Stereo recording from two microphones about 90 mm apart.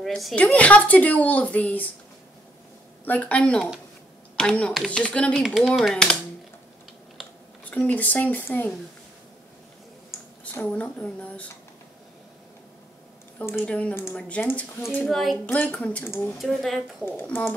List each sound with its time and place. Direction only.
0.0 s speech: centre (ahead or behind)
0.4 s a woman's voice: 15° left (ahead or behind)
3.1 s a woman's voice: 15° left (ahead or behind)
5.4 s speech: centre (ahead or behind)
7.7 s speech: 15° left (ahead or behind)
10.6 s a woman's voice: 10° left (ahead or behind)
13.7 s a woman's voice: 15° left (ahead or behind)
15.0 s speech: centre (ahead or behind)
15.4 s a woman's voice: 20° left (ahead or behind)
16.0 s speech: 25° left (ahead or behind)
16.4 s speech: centre (ahead or behind)
17.0 s speech: 25° left (ahead or behind)